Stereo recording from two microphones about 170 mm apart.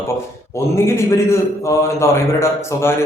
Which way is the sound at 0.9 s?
15° left (ahead or behind).